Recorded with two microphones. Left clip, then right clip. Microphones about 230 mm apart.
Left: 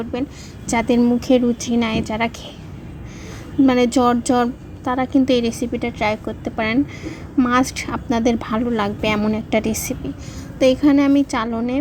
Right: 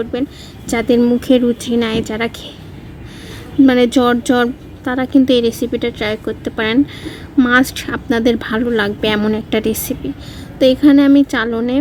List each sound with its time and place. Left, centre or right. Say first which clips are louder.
0.7 s a woman's voice: right 4 dB; centre
3.7 s a woman's voice: right 3 dB; centre